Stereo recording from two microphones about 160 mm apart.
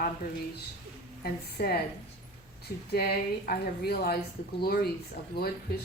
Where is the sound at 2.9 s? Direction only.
75° left (ahead or behind).